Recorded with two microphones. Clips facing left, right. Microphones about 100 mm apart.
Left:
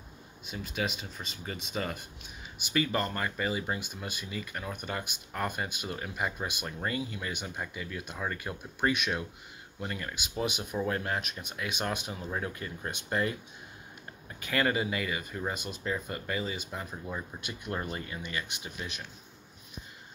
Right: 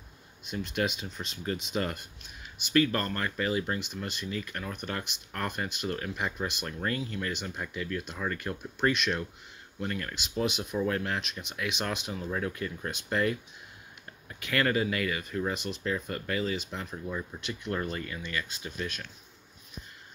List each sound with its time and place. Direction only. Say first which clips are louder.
0.5 s speech: right 3 dB; 5° left (ahead or behind)
14.5 s speech: right 1 dB; 10° left (ahead or behind)
17.3 s speech: right 3 dB; 20° left (ahead or behind)